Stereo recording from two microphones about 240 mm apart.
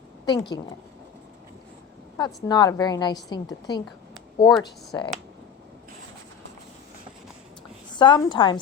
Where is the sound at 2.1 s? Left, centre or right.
Centre.